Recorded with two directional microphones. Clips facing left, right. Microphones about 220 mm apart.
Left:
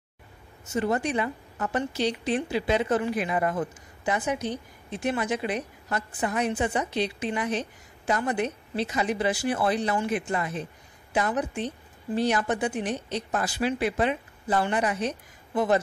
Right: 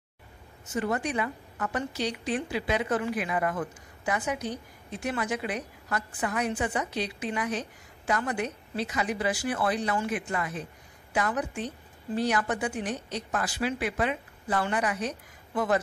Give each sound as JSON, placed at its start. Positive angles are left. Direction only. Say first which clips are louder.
{"t": 0.7, "sound": "a woman's voice", "louder": "left 3 dB", "side_deg": 25}